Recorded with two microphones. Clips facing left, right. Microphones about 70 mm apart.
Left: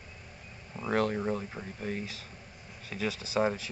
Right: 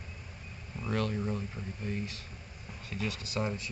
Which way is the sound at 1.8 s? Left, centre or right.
Left.